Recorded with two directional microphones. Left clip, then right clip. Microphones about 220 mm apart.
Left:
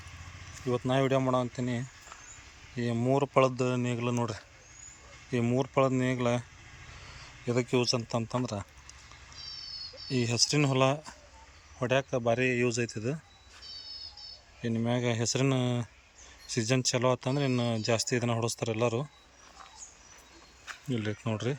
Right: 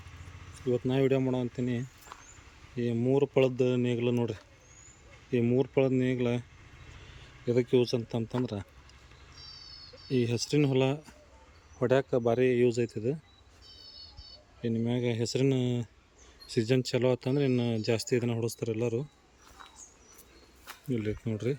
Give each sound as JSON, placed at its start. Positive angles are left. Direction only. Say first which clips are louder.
{"t": 0.7, "sound": "speech", "louder": "even", "side_deg": -5}
{"t": 7.4, "sound": "speech", "louder": "right 2 dB", "side_deg": -5}
{"t": 10.1, "sound": "speech", "louder": "left 1 dB", "side_deg": -5}
{"t": 11.8, "sound": "speech", "louder": "right 2 dB", "side_deg": -20}
{"t": 14.6, "sound": "speech", "louder": "even", "side_deg": -5}
{"t": 20.9, "sound": "speech", "louder": "even", "side_deg": -5}